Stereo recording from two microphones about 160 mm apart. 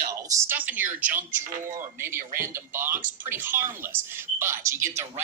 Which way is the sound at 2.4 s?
15° right (ahead or behind).